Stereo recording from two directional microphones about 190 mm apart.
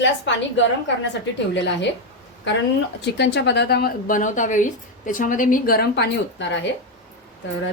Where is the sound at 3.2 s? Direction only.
65° left (ahead or behind).